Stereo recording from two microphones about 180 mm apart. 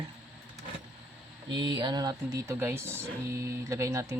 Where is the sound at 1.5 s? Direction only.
25° right (ahead or behind).